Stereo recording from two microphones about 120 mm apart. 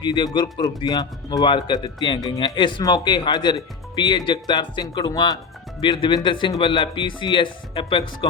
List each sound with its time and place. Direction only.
0.0 s speech: 40° left (ahead or behind)